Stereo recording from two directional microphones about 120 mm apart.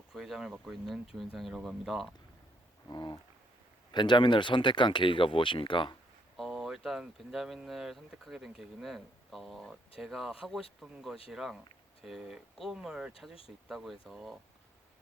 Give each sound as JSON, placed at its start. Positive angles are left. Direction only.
{"t": 0.1, "sound": "speech", "side_deg": -5}
{"t": 2.9, "sound": "speech", "side_deg": 40}
{"t": 6.3, "sound": "speech", "side_deg": 0}